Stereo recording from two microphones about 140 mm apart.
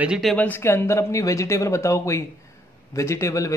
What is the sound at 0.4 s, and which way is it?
A man's voice, 15° left (ahead or behind).